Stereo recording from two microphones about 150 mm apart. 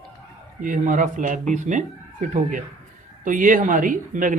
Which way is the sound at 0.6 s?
60° right (ahead or behind).